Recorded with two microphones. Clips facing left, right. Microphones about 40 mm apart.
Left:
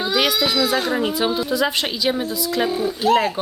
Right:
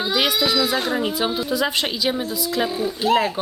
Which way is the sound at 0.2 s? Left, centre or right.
Centre.